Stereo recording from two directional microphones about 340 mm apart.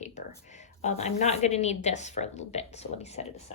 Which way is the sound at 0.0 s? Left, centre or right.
Left.